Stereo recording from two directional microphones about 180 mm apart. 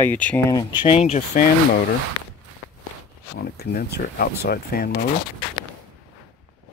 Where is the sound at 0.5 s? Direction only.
20° left (ahead or behind); by 1.4 s 40° left (ahead or behind).